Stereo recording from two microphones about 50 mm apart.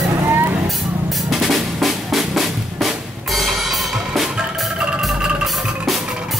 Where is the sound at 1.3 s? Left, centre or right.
Centre.